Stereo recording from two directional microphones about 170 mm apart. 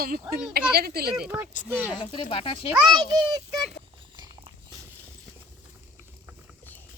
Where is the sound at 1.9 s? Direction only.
25° left (ahead or behind).